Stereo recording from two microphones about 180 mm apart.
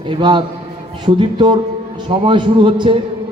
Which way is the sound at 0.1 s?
25° right (ahead or behind).